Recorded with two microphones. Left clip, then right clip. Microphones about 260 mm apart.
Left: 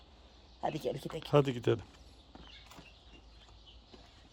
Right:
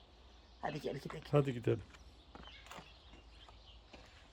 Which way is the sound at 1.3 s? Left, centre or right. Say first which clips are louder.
Left 5 dB; centre.